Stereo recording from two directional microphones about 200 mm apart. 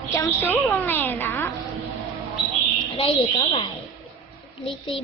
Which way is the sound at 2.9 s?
25° left (ahead or behind).